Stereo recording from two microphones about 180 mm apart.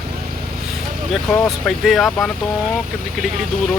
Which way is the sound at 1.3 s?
Centre (ahead or behind).